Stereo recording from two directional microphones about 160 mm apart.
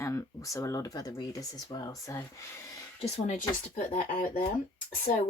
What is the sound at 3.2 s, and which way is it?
Speech, 50° left (ahead or behind).